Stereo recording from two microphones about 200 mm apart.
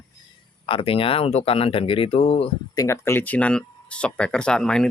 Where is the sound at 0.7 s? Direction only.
25° left (ahead or behind).